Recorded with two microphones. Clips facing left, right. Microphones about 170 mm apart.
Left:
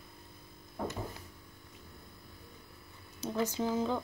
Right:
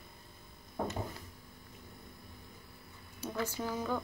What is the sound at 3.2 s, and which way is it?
Speech, 20° left (ahead or behind).